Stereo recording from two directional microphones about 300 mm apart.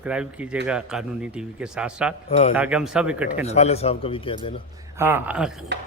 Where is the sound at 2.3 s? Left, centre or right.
Left.